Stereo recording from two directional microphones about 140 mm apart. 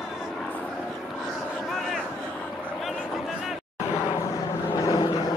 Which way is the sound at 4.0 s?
35° left (ahead or behind).